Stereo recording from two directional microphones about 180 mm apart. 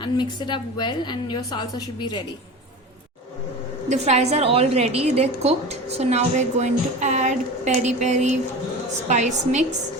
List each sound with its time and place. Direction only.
0.0 s a woman's voice: 25° left (ahead or behind)
3.8 s a woman's voice: 40° right (ahead or behind)